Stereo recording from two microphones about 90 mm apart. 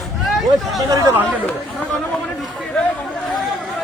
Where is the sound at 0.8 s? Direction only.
45° right (ahead or behind).